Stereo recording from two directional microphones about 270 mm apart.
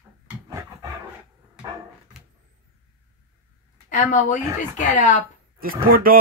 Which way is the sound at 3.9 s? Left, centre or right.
Left.